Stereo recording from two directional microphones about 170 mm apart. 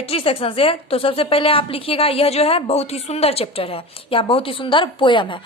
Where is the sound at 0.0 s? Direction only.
35° left (ahead or behind).